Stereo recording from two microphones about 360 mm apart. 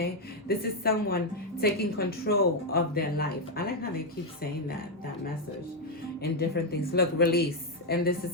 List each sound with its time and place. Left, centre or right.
0.0 s speech: left
6.5 s speech: left